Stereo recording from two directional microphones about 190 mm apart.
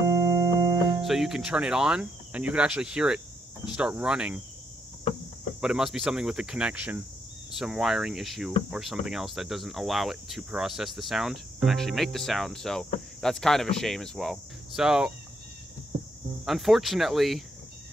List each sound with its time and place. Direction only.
0.1 s music: 15° right (ahead or behind)
0.8 s cricket: centre (ahead or behind)
5.6 s cricket: 5° right (ahead or behind)
16.4 s cricket: centre (ahead or behind)